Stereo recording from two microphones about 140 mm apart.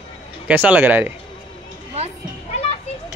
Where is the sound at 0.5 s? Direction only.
10° right (ahead or behind).